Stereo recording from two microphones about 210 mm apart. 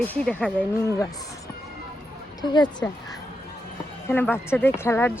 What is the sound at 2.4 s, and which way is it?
Speech, 20° left (ahead or behind).